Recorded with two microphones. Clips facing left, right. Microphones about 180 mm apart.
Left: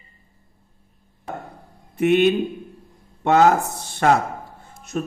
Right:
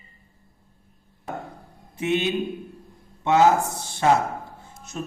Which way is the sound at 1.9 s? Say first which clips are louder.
Left 7 dB; 60° left (ahead or behind).